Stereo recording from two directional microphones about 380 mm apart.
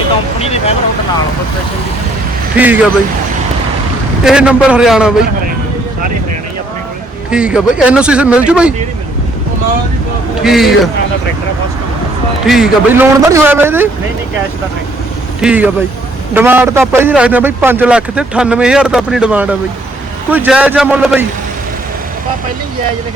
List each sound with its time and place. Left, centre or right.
0.3 s speech: centre
2.6 s a man's voice: centre
4.2 s a man's voice: centre
7.3 s a man's voice: centre
10.4 s a man's voice: centre
12.5 s a man's voice: centre
15.4 s a man's voice: centre